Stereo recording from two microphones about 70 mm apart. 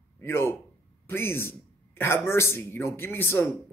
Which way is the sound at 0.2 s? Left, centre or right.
Left.